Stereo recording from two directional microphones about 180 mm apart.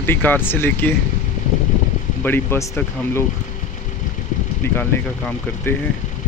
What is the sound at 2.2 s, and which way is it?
Speech, 15° left (ahead or behind).